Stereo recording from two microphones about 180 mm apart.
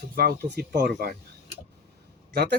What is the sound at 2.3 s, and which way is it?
Speech, 65° right (ahead or behind).